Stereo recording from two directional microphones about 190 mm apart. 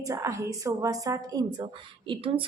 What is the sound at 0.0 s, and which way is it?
A woman's voice, 15° right (ahead or behind).